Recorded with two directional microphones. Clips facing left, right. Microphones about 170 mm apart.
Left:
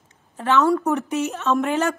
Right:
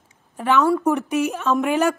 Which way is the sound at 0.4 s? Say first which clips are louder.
Even; 10° right (ahead or behind).